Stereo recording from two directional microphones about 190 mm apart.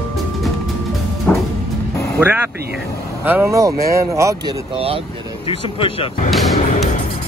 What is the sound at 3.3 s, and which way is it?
Speech, 10° right (ahead or behind).